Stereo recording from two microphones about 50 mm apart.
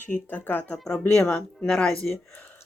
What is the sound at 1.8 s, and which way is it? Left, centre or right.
Speech, centre.